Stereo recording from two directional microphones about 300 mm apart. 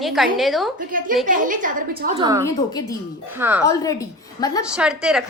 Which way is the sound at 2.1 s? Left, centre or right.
Centre.